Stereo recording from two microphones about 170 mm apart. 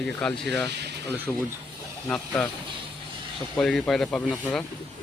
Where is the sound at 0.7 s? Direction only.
80° right.